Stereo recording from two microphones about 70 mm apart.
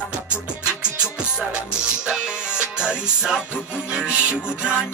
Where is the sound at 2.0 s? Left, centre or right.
Centre.